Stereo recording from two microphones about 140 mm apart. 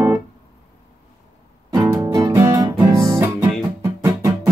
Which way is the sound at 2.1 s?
20° right (ahead or behind).